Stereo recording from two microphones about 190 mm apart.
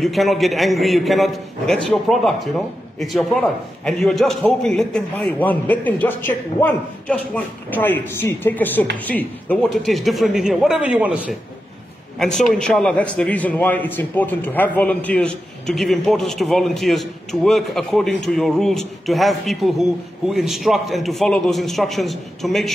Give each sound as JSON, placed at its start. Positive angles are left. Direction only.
{"t": 0.0, "sound": "a man's voice", "side_deg": 0}